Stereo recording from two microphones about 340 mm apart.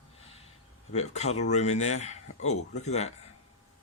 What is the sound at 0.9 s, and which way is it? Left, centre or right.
Speech, centre.